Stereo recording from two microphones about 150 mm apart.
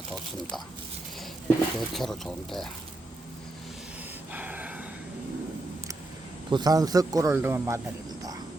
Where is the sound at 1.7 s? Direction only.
Centre (ahead or behind).